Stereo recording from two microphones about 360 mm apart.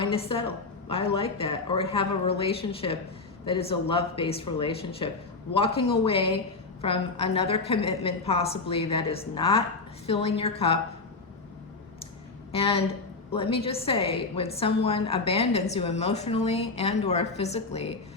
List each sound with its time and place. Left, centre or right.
0.0 s a woman's voice: centre
12.5 s a woman's voice: centre